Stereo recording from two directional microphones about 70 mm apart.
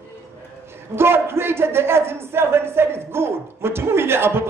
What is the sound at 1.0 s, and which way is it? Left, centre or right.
A man's voice, right.